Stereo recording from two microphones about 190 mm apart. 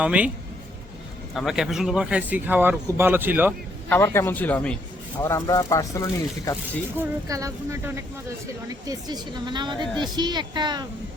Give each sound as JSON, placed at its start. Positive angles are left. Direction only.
{"t": 0.0, "sound": "speech", "side_deg": -5}
{"t": 1.3, "sound": "speech", "side_deg": 0}
{"t": 3.8, "sound": "a man's voice", "side_deg": 10}
{"t": 7.3, "sound": "a woman's voice", "side_deg": -15}